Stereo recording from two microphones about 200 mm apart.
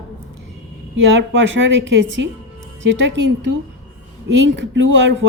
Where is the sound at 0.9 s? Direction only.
65° right (ahead or behind).